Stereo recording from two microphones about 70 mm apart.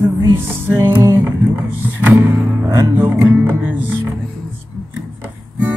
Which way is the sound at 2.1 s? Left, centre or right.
Right.